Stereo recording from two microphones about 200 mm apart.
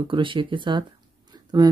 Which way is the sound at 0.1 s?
25° right (ahead or behind).